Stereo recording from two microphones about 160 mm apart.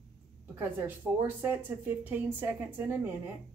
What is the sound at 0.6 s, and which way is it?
A woman's voice, 15° right (ahead or behind).